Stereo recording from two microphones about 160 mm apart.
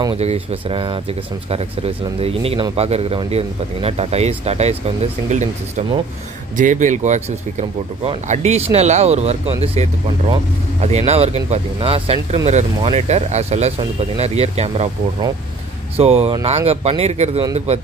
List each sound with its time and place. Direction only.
0.1 s speech: 40° right (ahead or behind)
16.0 s speech: 40° right (ahead or behind)